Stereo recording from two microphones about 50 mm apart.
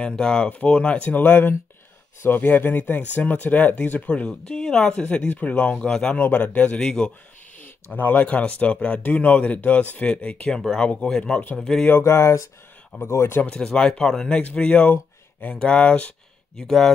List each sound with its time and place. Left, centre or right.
0.1 s speech: centre
0.5 s speech: left
4.1 s speech: left
4.6 s speech: centre
5.3 s speech: left
5.8 s speech: centre
6.1 s speech: left
7.6 s speech: left
11.0 s speech: centre
12.0 s speech: left
13.0 s speech: left
13.5 s speech: centre
16.5 s speech: centre